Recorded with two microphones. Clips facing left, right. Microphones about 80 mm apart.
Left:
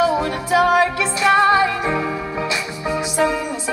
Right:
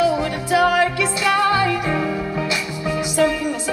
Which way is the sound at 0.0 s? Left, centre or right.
Left.